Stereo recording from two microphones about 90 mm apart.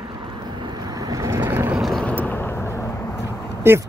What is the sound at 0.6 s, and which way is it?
Vehicle, 50° right (ahead or behind).